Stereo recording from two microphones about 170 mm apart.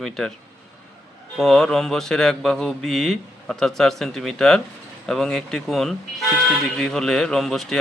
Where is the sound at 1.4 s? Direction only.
5° left (ahead or behind).